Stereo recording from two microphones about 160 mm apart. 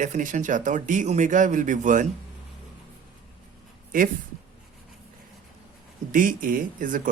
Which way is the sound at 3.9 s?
60° right (ahead or behind).